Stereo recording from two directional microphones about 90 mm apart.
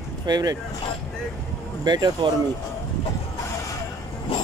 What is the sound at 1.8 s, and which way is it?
Speech, 50° right (ahead or behind).